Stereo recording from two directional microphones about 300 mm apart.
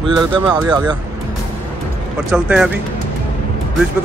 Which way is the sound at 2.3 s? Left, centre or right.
Centre.